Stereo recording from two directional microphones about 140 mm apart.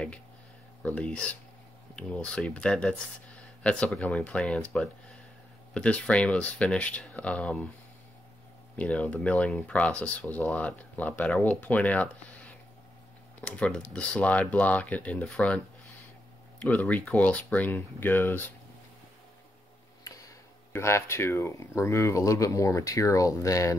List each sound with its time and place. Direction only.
0.8 s speech: 10° left (ahead or behind)
8.7 s speech: 10° left (ahead or behind)
16.6 s speech: 10° left (ahead or behind)
20.7 s speech: 20° left (ahead or behind)